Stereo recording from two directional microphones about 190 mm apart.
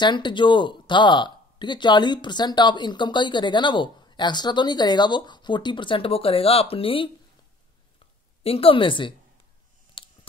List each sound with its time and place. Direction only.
0.0 s speech: 25° left (ahead or behind)
8.5 s speech: 30° left (ahead or behind)
10.0 s a sound: 25° left (ahead or behind)